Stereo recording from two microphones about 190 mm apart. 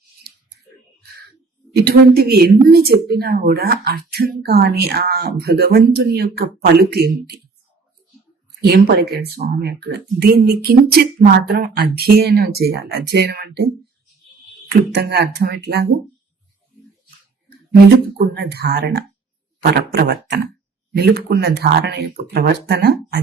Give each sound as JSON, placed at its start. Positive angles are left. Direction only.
{"t": 1.7, "sound": "speech", "side_deg": -55}
{"t": 8.6, "sound": "speech", "side_deg": -55}
{"t": 14.7, "sound": "speech", "side_deg": -60}
{"t": 17.9, "sound": "speech", "side_deg": -60}